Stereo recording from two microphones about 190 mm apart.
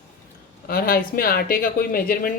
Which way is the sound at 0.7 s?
50° left (ahead or behind).